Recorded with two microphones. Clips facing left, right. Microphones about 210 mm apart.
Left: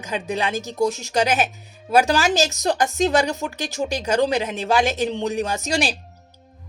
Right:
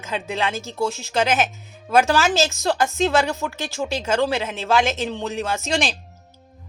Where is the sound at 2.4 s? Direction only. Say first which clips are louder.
Even; 40° left (ahead or behind).